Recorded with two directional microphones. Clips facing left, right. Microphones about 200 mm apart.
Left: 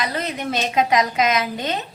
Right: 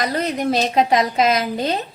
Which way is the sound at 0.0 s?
40° right (ahead or behind).